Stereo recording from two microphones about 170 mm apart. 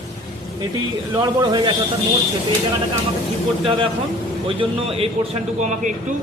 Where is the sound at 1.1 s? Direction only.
25° right (ahead or behind).